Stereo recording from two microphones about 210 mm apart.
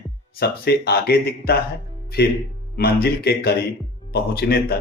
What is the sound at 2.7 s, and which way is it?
Speech, 50° left (ahead or behind).